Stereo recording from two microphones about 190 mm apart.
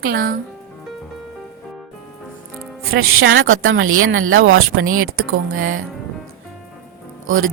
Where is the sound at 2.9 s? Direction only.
90° right.